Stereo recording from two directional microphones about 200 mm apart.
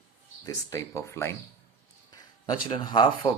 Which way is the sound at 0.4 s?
15° left (ahead or behind).